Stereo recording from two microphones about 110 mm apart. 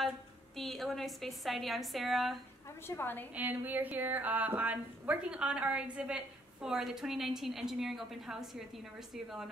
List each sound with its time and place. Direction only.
0.6 s a woman's voice: centre (ahead or behind)
2.9 s a woman's voice: 20° left (ahead or behind)
3.3 s a woman's voice: 15° right (ahead or behind)